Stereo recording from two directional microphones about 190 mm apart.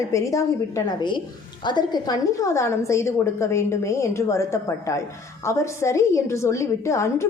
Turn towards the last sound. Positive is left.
turn(degrees=15)  # may be behind; listen again after turning